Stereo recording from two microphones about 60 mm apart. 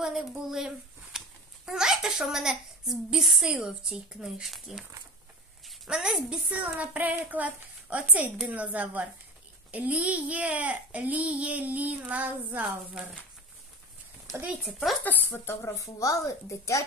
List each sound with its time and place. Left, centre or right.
0.0 s a child's voice: centre
5.9 s a child's voice: centre
6.5 s a child's voice: right
14.6 s speech: centre
15.0 s speech: left
15.6 s a woman's voice: left